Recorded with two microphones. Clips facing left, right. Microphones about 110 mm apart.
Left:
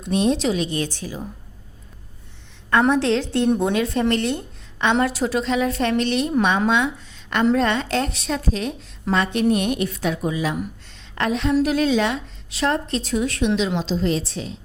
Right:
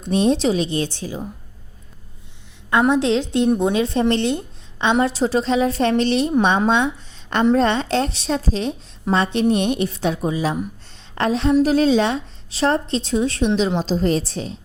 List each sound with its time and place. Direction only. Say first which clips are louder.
0.0 s a woman's voice: right 2 dB; 35° right (ahead or behind)
2.6 s a woman's voice: right 1 dB; 15° right (ahead or behind); by 14.5 s 40° right (ahead or behind)